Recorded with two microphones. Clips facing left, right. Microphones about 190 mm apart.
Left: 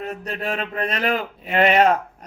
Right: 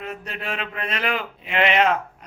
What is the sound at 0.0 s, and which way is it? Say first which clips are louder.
A man's voice: left 4 dB; 40° left (ahead or behind).